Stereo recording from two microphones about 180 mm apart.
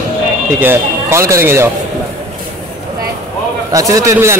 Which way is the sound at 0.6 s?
15° right (ahead or behind).